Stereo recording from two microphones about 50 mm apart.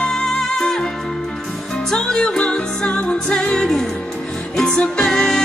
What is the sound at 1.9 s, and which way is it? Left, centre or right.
Music, centre.